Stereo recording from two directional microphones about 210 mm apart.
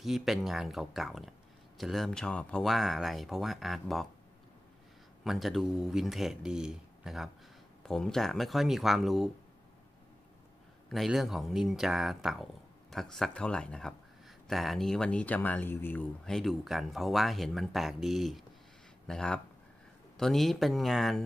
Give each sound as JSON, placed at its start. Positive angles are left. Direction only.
{"t": 0.0, "sound": "speech", "side_deg": 0}
{"t": 5.2, "sound": "speech", "side_deg": 0}
{"t": 10.9, "sound": "speech", "side_deg": 0}